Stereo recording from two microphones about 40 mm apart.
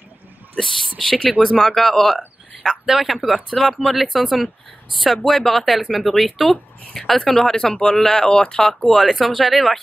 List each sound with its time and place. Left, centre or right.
0.6 s speech: centre
2.9 s speech: centre
7.2 s speech: centre
8.9 s speech: centre